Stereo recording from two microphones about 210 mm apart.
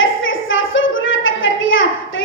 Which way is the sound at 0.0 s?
70° left (ahead or behind).